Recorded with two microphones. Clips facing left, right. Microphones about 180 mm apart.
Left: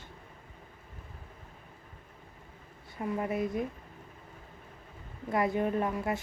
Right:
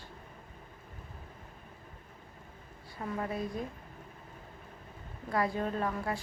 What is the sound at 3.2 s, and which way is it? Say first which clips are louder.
Speech: left 4 dB; 20° left (ahead or behind).